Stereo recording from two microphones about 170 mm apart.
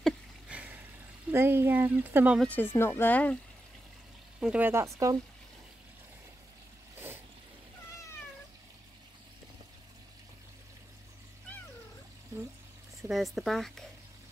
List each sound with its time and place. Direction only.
0.0 s a sound: 10° right (ahead or behind)
1.3 s speech: 15° right (ahead or behind)
2.4 s speech: 10° left (ahead or behind)
4.4 s speech: 5° right (ahead or behind)
13.1 s speech: centre (ahead or behind)